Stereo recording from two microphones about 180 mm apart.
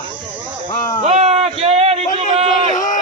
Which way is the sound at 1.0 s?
35° right (ahead or behind).